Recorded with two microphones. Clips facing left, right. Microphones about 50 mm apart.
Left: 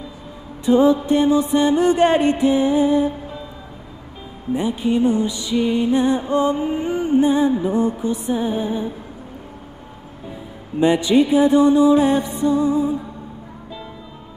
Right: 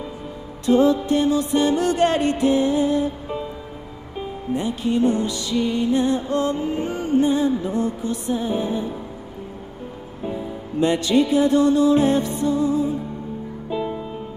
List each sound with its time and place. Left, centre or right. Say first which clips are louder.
0.7 s music: left 2 dB; centre
4.6 s music: left 2 dB; centre
10.8 s music: left 3 dB; centre
13.7 s music: right 11 dB; right